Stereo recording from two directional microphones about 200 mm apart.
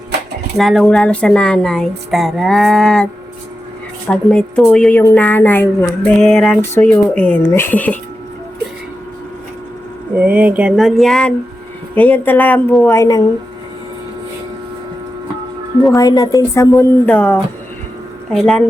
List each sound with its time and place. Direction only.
0.5 s speech: centre (ahead or behind)
4.1 s a woman's voice: 5° left (ahead or behind)
6.6 s a woman's voice: 10° left (ahead or behind)
10.2 s a woman's voice: 5° right (ahead or behind); by 13.2 s 15° left (ahead or behind)
16.0 s a woman's voice: 20° left (ahead or behind); by 18.6 s centre (ahead or behind)